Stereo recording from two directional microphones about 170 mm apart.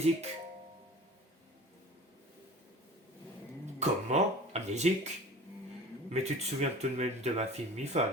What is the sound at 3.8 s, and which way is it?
Speech, 40° right (ahead or behind).